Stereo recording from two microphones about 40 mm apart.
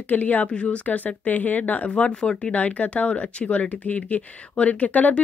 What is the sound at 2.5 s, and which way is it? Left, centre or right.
Speech, left.